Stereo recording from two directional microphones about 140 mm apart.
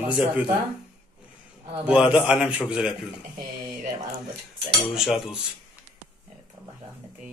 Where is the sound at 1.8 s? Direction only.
10° right (ahead or behind).